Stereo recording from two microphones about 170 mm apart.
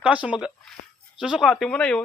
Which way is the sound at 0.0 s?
5° right (ahead or behind).